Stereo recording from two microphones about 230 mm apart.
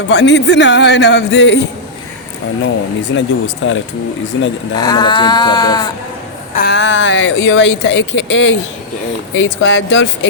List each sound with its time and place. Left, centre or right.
0.1 s speech: left
3.2 s speech: left
4.8 s sheep: centre
6.6 s speech: left